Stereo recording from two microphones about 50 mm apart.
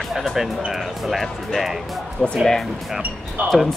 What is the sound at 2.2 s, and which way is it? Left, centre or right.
Speech, centre.